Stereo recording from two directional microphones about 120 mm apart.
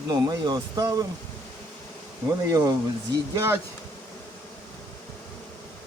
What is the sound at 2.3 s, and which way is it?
Speech, 30° right (ahead or behind).